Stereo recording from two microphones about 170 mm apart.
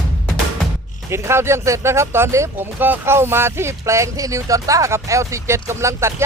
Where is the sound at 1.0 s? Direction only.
15° right (ahead or behind).